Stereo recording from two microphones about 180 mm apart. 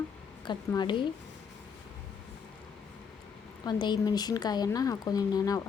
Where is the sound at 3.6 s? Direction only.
25° left (ahead or behind).